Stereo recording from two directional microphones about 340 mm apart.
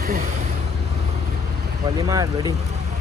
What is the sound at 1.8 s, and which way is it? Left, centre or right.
Speech, centre.